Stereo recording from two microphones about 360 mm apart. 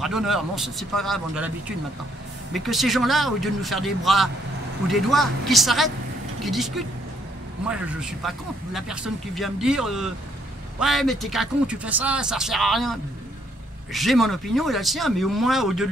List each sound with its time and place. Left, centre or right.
0.0 s speech: centre
2.5 s speech: centre
13.9 s speech: centre